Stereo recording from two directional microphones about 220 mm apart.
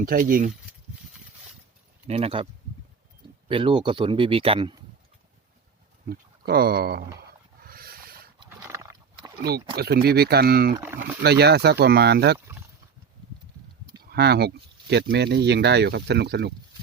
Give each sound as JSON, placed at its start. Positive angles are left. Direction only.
{"t": 0.0, "sound": "speech", "side_deg": -40}
{"t": 2.0, "sound": "speech", "side_deg": -25}
{"t": 3.5, "sound": "speech", "side_deg": -25}
{"t": 6.1, "sound": "speech", "side_deg": -45}
{"t": 7.6, "sound": "a sound", "side_deg": -45}
{"t": 8.4, "sound": "horse", "side_deg": -15}
{"t": 9.7, "sound": "speech", "side_deg": -45}
{"t": 10.8, "sound": "speech", "side_deg": -10}
{"t": 11.2, "sound": "speech", "side_deg": -50}
{"t": 14.0, "sound": "speech", "side_deg": -45}